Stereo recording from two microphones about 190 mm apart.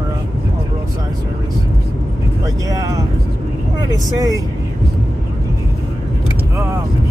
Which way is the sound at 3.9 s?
20° right (ahead or behind).